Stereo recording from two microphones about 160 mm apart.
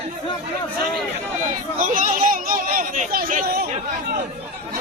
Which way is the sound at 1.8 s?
55° right (ahead or behind).